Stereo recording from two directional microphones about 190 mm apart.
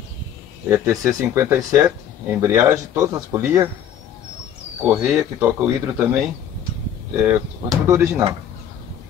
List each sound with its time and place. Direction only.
0.7 s speech: 15° right (ahead or behind)
4.8 s speech: 10° right (ahead or behind)
7.8 s speech: 15° right (ahead or behind)